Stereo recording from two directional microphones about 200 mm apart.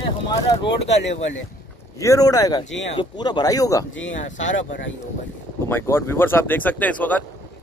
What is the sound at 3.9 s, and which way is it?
Speech, 70° left (ahead or behind).